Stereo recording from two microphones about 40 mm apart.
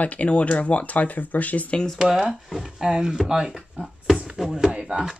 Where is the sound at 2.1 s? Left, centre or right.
Centre.